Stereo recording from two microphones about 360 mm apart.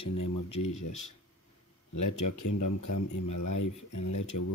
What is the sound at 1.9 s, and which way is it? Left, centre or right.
Speech, left.